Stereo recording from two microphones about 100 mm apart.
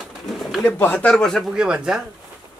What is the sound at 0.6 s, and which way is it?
Speech, 20° left (ahead or behind).